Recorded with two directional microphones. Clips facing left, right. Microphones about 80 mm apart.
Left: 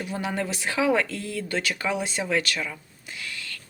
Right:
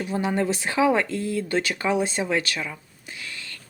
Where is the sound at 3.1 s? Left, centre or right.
Right.